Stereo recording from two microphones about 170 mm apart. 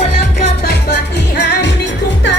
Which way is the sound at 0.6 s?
85° left.